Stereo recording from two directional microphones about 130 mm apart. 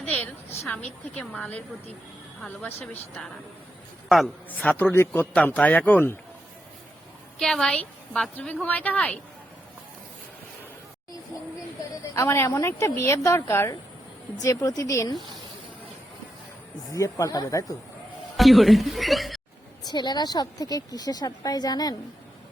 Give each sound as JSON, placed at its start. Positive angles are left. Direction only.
{"t": 0.6, "sound": "a woman's voice", "side_deg": 10}
{"t": 4.4, "sound": "a woman's voice", "side_deg": 10}
{"t": 7.3, "sound": "a woman's voice", "side_deg": 5}
{"t": 12.1, "sound": "a woman's voice", "side_deg": 20}
{"t": 16.9, "sound": "a woman's voice", "side_deg": 25}
{"t": 18.3, "sound": "speech", "side_deg": 0}
{"t": 19.8, "sound": "a woman's voice", "side_deg": 35}